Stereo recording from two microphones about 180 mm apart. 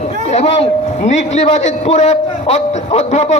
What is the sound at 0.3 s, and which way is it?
A man's voice, 35° left (ahead or behind).